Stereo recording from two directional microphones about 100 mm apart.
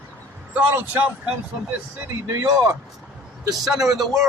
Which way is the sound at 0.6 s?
20° right (ahead or behind).